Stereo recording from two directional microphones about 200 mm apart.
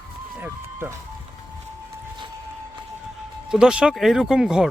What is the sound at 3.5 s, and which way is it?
Speech, 5° right (ahead or behind).